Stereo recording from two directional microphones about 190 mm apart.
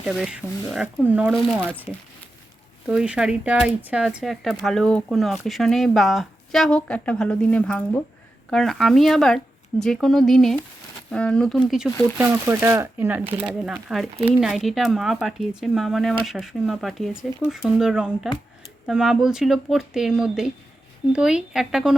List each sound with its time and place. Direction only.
0.0 s speech: 5° right (ahead or behind)
12.3 s speech: 15° right (ahead or behind)